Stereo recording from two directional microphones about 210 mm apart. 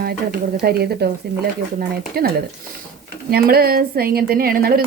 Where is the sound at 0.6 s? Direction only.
50° right (ahead or behind).